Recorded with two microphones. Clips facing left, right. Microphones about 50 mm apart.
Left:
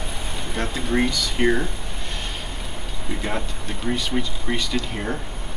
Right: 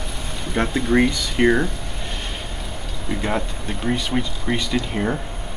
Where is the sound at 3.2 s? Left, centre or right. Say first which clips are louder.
Right 4 dB; centre.